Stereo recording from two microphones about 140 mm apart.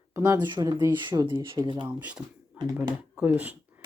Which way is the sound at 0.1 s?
20° right (ahead or behind).